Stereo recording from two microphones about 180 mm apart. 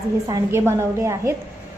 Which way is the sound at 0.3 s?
15° right (ahead or behind).